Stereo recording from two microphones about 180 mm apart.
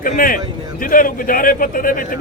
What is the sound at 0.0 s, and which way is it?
A man's voice, 50° left (ahead or behind).